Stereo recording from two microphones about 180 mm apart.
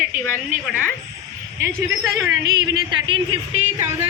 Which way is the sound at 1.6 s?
15° right (ahead or behind).